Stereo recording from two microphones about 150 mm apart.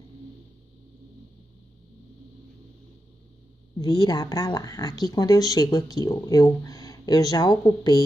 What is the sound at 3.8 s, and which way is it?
Speech, 25° left (ahead or behind).